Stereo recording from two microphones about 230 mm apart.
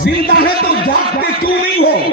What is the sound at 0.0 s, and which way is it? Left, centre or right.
Speech, left.